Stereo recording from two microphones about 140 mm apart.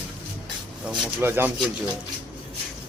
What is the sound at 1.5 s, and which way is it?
Speech, 5° right (ahead or behind).